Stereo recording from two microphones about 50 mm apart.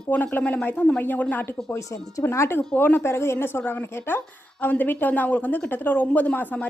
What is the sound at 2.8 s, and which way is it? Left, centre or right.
Speech, left.